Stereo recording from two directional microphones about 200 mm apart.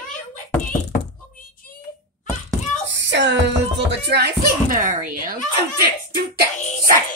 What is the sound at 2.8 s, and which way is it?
Music, 65° right (ahead or behind).